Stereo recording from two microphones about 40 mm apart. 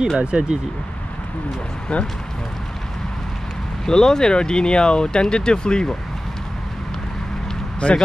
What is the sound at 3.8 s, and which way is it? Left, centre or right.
Speech, centre.